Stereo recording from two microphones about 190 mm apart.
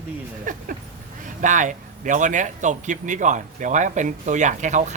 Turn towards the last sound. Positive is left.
turn(degrees=-40)  # may be behind; listen again after turning